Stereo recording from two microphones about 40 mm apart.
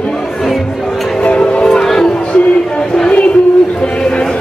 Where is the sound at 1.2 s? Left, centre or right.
Left.